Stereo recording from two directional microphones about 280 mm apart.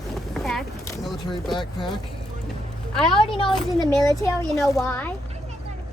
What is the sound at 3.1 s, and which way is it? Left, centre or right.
A child's voice, centre.